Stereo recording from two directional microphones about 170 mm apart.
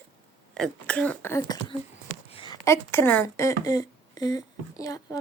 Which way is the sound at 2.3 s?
30° left (ahead or behind).